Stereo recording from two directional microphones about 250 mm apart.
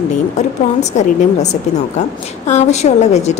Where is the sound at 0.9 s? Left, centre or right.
Left.